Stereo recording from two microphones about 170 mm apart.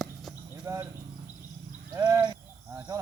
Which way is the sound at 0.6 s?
15° right (ahead or behind).